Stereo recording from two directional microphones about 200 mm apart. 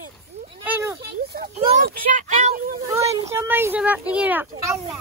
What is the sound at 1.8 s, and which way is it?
Speech, 40° right (ahead or behind).